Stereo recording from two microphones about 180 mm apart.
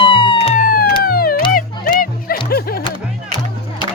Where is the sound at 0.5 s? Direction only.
50° left (ahead or behind).